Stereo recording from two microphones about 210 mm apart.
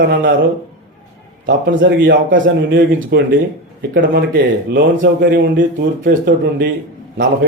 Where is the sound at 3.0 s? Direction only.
50° right (ahead or behind).